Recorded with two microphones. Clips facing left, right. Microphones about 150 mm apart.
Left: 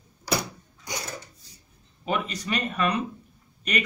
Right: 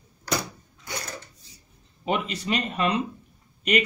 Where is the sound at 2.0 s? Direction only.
25° right (ahead or behind).